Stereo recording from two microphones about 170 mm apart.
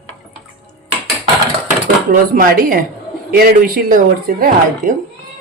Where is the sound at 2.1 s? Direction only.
55° right (ahead or behind).